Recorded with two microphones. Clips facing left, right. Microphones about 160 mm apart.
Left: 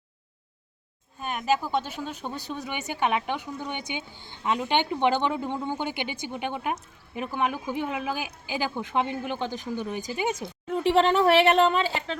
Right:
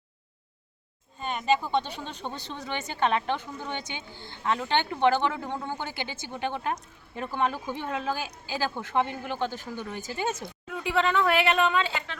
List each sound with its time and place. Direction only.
1.2 s speech: 5° left (ahead or behind)
10.7 s speech: 30° left (ahead or behind)